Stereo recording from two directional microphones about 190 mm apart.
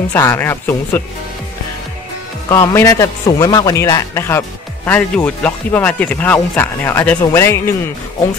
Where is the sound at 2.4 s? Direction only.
15° left (ahead or behind).